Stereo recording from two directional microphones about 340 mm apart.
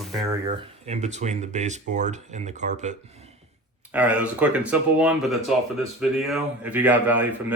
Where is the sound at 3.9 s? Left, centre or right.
Centre.